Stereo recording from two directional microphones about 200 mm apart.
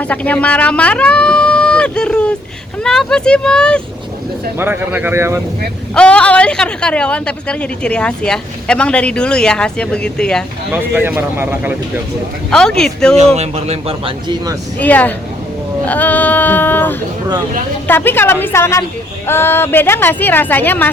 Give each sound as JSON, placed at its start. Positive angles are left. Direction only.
{"t": 0.0, "sound": "a woman's voice", "side_deg": 5}
{"t": 4.5, "sound": "speech", "side_deg": -10}
{"t": 5.9, "sound": "a woman's voice", "side_deg": 5}
{"t": 10.7, "sound": "speech", "side_deg": -10}
{"t": 12.5, "sound": "a woman's voice", "side_deg": 5}
{"t": 13.1, "sound": "a man's voice", "side_deg": -35}
{"t": 14.8, "sound": "speech", "side_deg": 10}